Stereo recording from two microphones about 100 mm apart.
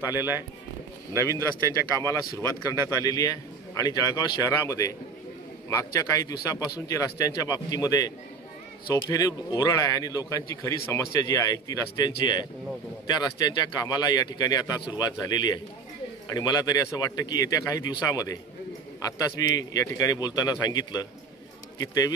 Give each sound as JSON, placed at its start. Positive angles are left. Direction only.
{"t": 0.0, "sound": "speech", "side_deg": -25}
{"t": 3.0, "sound": "a man's voice", "side_deg": 35}